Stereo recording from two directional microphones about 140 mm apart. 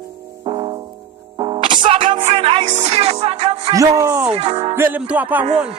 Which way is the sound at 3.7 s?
20° right (ahead or behind).